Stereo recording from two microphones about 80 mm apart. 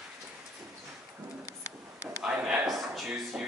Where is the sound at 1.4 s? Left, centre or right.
Left.